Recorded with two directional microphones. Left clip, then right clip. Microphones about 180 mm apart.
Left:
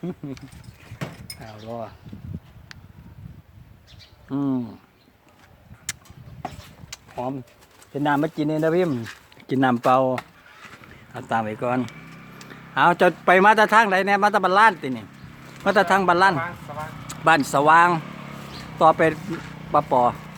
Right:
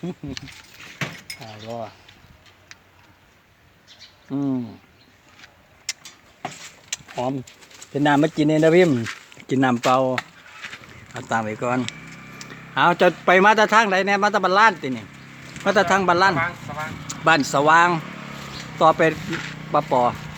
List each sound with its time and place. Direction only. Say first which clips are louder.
0.0 s a man's voice: right 2 dB; 5° right (ahead or behind)
1.6 s a man's voice: right 1 dB; 5° left (ahead or behind)
4.3 s speech: even; 5° left (ahead or behind)
5.9 s vehicle: right 3 dB; 10° left (ahead or behind)
6.9 s a sound: right 4 dB; 20° right (ahead or behind)
7.9 s speech: right 4 dB; 30° right (ahead or behind)
9.5 s a man's voice: even; centre (ahead or behind)
18.0 s vehicle: right 3 dB; 45° right (ahead or behind)
18.8 s a man's voice: even; centre (ahead or behind)